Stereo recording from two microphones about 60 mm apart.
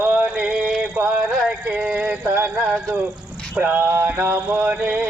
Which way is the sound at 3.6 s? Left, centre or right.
Right.